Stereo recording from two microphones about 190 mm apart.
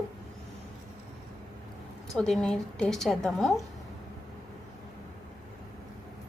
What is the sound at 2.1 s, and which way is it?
A woman's voice, 5° left (ahead or behind).